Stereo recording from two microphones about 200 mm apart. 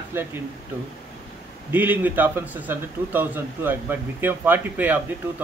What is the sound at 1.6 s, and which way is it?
A man's voice, 10° right (ahead or behind).